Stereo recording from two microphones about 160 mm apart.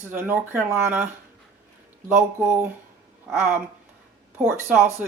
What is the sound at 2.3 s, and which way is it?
Speech, 15° right (ahead or behind).